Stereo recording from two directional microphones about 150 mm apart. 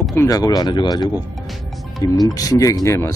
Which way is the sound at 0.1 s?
20° left (ahead or behind).